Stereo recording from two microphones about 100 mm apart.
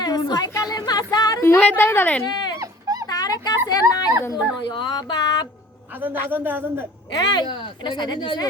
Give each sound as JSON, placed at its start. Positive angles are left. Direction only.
{"t": 0.0, "sound": "a sound", "side_deg": 45}
{"t": 0.5, "sound": "music", "side_deg": 40}
{"t": 1.4, "sound": "a woman's voice", "side_deg": 25}
{"t": 2.2, "sound": "speech", "side_deg": 45}
{"t": 2.6, "sound": "dog", "side_deg": -35}
{"t": 3.1, "sound": "a sound", "side_deg": 40}
{"t": 3.7, "sound": "speech", "side_deg": 40}
{"t": 4.7, "sound": "a sound", "side_deg": 50}
{"t": 6.0, "sound": "a man's voice", "side_deg": -20}
{"t": 7.2, "sound": "speech", "side_deg": 45}